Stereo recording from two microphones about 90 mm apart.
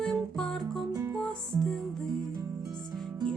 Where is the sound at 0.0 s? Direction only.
5° left (ahead or behind).